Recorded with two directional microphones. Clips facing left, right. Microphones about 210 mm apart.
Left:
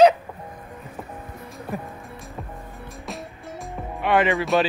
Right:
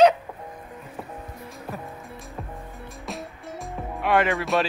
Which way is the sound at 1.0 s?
5° right (ahead or behind).